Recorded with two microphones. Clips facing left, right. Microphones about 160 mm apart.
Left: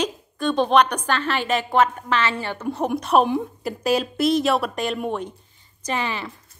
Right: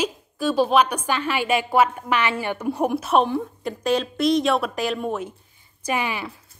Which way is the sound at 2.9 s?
Centre (ahead or behind).